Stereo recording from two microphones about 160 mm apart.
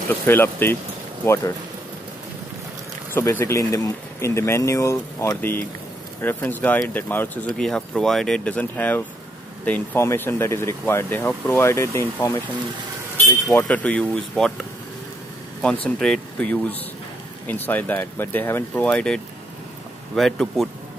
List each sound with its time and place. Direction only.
0.2 s speech: 15° left (ahead or behind)
3.1 s speech: 15° left (ahead or behind)
13.5 s speech: 10° left (ahead or behind)
15.6 s speech: 5° left (ahead or behind)